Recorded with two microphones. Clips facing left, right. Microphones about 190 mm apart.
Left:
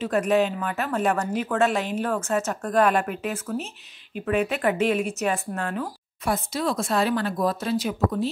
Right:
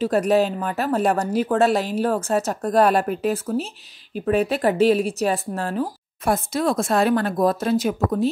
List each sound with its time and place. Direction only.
0.0 s speech: 35° right (ahead or behind)
6.2 s speech: 50° right (ahead or behind)